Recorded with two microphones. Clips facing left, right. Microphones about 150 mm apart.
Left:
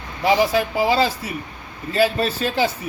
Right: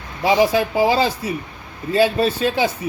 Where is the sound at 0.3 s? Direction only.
25° right (ahead or behind).